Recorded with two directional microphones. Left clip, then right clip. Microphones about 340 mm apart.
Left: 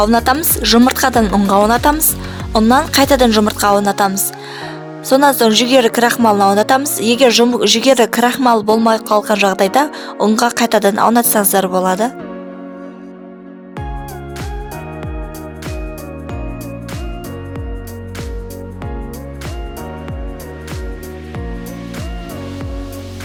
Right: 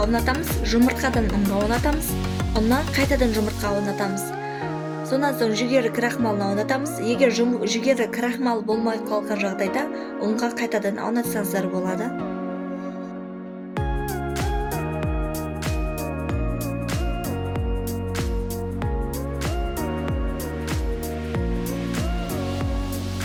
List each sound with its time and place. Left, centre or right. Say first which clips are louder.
0.0 s a woman's voice: left 10 dB; left